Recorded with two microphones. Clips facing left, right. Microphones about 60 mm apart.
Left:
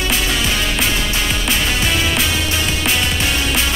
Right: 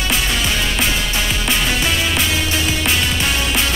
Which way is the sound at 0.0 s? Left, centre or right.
Centre.